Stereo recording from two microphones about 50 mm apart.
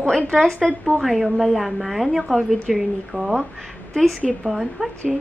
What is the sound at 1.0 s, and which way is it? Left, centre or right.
A woman's voice, centre.